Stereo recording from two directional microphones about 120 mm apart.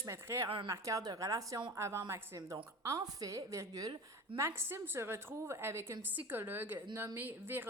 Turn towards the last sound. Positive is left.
turn(degrees=-15)  # may be behind; listen again after turning